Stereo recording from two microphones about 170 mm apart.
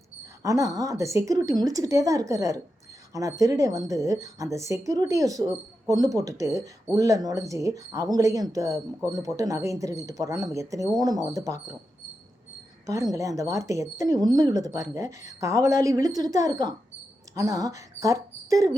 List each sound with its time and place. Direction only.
0.4 s speech: 20° right (ahead or behind)
12.8 s speech: 20° right (ahead or behind)